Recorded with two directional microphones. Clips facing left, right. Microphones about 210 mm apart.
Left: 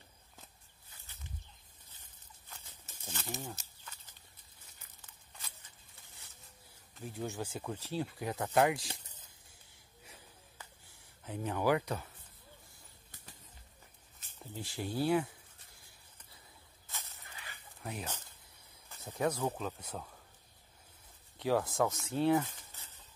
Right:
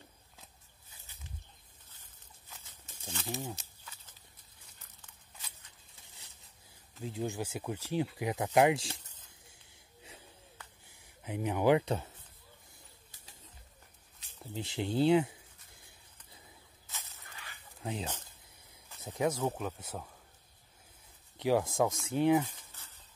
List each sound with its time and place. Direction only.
3.1 s speech: 5° left (ahead or behind)
7.0 s speech: 15° right (ahead or behind)
10.9 s speech: 15° right (ahead or behind)
14.5 s a sound: 20° right (ahead or behind)
16.8 s a sound: centre (ahead or behind)
17.8 s speech: 25° right (ahead or behind)
18.9 s speech: 10° right (ahead or behind)
21.4 s speech: 15° right (ahead or behind)